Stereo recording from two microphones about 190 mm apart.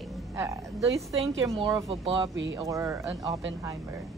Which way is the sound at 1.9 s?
30° right (ahead or behind).